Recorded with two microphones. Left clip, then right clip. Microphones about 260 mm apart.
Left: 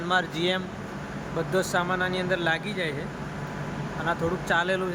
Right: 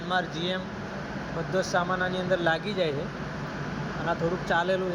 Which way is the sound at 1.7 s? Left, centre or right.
Centre.